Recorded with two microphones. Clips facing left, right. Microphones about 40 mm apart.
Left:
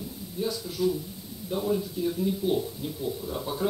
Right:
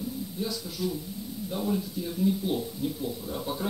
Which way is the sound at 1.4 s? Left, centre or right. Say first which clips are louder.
Left 3 dB; centre.